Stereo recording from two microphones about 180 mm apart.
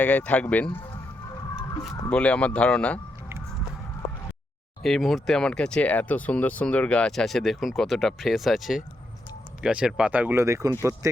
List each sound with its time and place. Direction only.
0.0 s speech: 10° left (ahead or behind)
2.0 s speech: 5° left (ahead or behind)
4.8 s speech: centre (ahead or behind); by 11.2 s 20° right (ahead or behind)